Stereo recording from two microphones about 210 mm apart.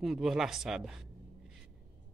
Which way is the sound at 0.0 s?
Centre (ahead or behind).